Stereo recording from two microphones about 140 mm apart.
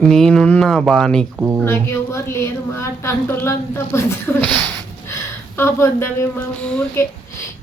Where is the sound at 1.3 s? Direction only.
20° right (ahead or behind).